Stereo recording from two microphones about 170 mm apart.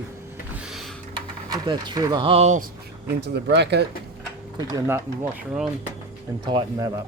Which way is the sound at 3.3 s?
80° right.